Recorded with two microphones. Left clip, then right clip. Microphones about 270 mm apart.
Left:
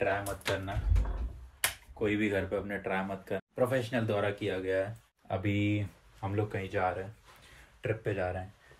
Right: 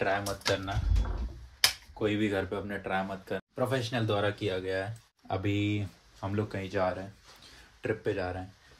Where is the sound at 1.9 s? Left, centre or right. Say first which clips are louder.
Right 1 dB; centre.